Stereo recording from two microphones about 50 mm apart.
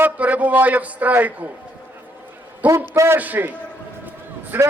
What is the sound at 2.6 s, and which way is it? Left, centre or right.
Speech, right.